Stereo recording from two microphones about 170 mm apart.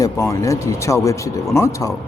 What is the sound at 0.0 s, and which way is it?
Speech, 20° left (ahead or behind).